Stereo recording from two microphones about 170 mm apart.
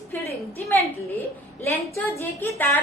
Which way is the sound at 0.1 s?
10° left (ahead or behind).